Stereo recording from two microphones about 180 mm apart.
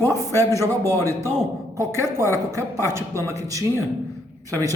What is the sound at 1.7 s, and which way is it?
Speech, 15° right (ahead or behind).